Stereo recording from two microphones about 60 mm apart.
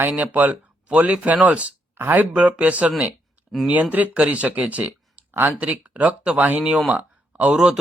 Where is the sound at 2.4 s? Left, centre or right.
Right.